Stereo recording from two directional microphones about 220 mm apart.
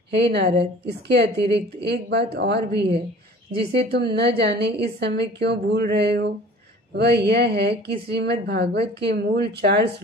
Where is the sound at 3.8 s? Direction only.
45° right (ahead or behind).